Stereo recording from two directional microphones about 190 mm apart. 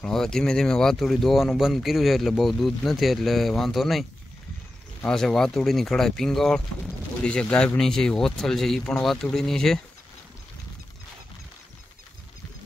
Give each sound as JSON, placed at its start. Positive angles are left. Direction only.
{"t": 0.0, "sound": "speech", "side_deg": 5}
{"t": 5.0, "sound": "speech", "side_deg": 5}